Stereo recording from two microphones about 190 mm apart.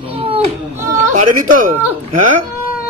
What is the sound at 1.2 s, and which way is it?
A man's voice, 45° right (ahead or behind).